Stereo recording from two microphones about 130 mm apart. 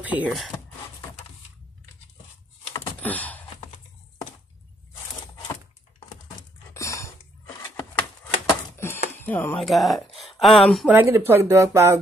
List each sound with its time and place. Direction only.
0.0 s speech: 10° right (ahead or behind)
3.0 s a sound: 10° left (ahead or behind)
6.7 s cough: 20° left (ahead or behind)
8.7 s chopping: 20° left (ahead or behind)
9.2 s speech: 15° left (ahead or behind)
9.6 s speech: centre (ahead or behind)
10.9 s speech: 15° right (ahead or behind)